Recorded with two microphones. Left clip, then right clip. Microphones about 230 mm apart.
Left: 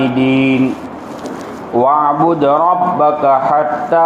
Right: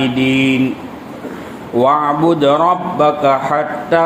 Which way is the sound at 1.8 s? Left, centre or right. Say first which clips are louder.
Left 1 dB; right.